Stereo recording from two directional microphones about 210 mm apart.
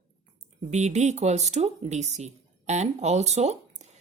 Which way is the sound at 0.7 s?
35° right (ahead or behind).